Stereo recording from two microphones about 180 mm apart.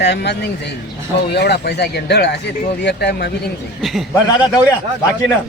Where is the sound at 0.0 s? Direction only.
70° left (ahead or behind).